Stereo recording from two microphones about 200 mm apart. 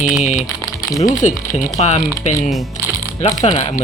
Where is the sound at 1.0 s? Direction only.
35° left (ahead or behind).